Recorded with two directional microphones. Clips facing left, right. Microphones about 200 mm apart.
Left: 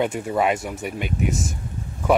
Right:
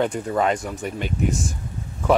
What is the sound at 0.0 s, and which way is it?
Speech, 10° left (ahead or behind).